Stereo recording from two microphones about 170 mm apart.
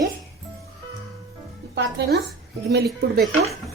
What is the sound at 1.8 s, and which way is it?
Speech, 90° right.